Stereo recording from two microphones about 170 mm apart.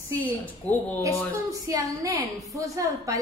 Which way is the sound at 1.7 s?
20° right (ahead or behind).